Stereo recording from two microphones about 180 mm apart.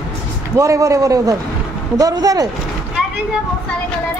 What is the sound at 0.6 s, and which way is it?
A man's voice, 15° right (ahead or behind).